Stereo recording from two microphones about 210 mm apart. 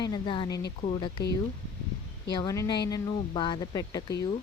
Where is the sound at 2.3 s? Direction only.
15° left (ahead or behind).